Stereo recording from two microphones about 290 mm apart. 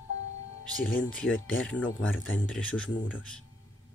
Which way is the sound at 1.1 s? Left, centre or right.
Centre.